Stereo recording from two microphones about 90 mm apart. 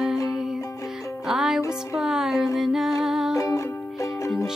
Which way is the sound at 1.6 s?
35° left (ahead or behind).